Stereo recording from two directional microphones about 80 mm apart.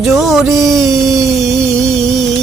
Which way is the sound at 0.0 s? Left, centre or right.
Centre.